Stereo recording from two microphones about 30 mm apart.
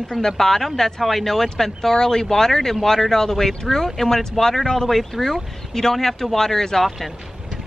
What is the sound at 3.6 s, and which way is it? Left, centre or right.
Speech, centre.